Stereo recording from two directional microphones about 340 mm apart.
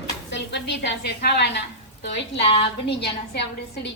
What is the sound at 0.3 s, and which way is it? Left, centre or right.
A woman's voice, left.